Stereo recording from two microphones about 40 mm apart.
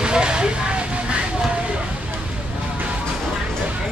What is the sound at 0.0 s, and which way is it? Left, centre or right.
Vehicle, right.